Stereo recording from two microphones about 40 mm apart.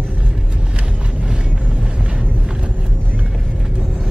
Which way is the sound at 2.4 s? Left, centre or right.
Right.